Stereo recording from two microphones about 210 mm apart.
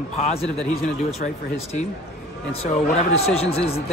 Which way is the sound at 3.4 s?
30° left (ahead or behind).